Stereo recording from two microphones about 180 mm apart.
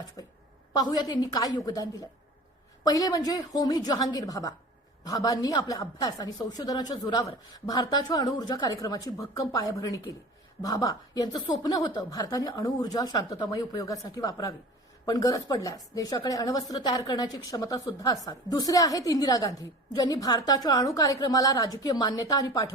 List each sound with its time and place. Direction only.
0.7 s speech: 20° left (ahead or behind)